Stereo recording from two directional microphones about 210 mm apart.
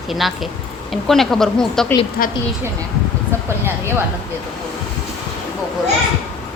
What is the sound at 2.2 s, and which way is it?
Speech, 45° left (ahead or behind).